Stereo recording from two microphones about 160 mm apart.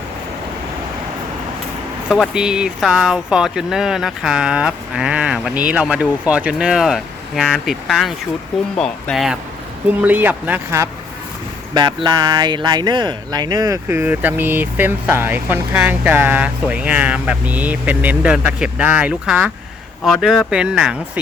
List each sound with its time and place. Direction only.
2.0 s speech: 5° right (ahead or behind)
11.7 s speech: 25° right (ahead or behind); by 20.9 s 5° right (ahead or behind)